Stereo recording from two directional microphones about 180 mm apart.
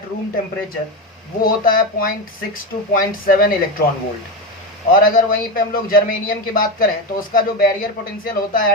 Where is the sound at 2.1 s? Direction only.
50° left (ahead or behind).